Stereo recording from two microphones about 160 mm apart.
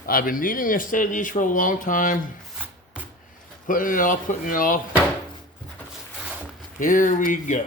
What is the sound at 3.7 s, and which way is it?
Speech, 55° left (ahead or behind).